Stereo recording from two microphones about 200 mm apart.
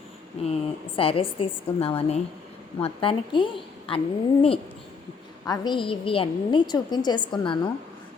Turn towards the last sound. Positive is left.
turn(degrees=20)  # may be behind; listen again after turning